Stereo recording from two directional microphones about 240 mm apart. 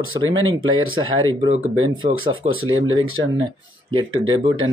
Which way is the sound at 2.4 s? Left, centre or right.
Right.